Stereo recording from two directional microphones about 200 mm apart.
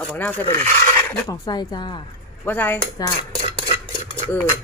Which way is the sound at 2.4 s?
10° left (ahead or behind).